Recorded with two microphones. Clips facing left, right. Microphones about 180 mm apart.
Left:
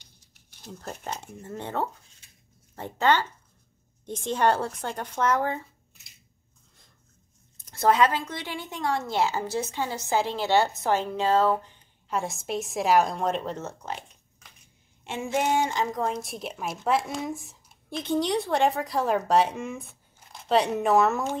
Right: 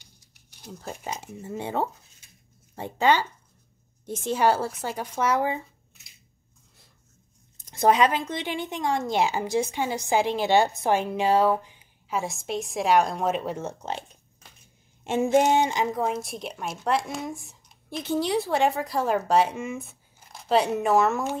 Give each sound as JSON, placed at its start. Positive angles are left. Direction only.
{"t": 0.0, "sound": "speech", "side_deg": -10}
{"t": 7.5, "sound": "speech", "side_deg": -15}
{"t": 15.0, "sound": "speech", "side_deg": -40}
{"t": 15.5, "sound": "a woman's voice", "side_deg": -15}